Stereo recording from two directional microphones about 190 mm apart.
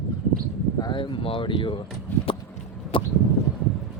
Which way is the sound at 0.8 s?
25° left (ahead or behind).